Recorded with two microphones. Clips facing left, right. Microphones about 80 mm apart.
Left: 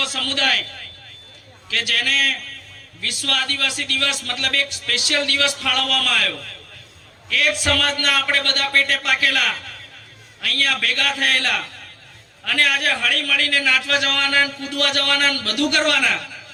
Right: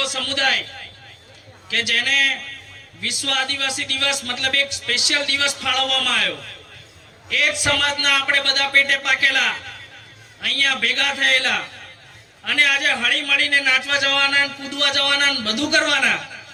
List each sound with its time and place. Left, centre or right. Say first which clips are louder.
0.0 s a man's voice: right 1 dB; right
1.7 s a man's voice: right 1 dB; right